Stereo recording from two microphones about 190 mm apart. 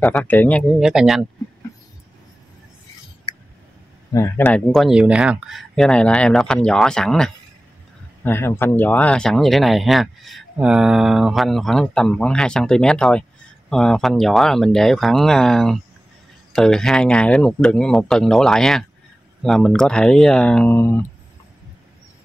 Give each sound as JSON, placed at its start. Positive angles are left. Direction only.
{"t": 0.1, "sound": "speech", "side_deg": 10}
{"t": 4.1, "sound": "speech", "side_deg": 15}
{"t": 4.5, "sound": "speech", "side_deg": 5}